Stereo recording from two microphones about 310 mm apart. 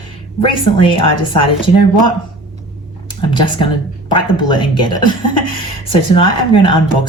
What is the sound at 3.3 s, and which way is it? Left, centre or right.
Speech, centre.